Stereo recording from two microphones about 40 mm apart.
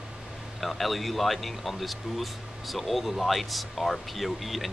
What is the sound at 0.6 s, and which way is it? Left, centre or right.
Speech, centre.